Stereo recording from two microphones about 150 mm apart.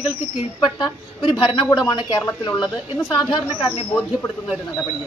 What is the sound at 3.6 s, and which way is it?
Speech, 35° left (ahead or behind).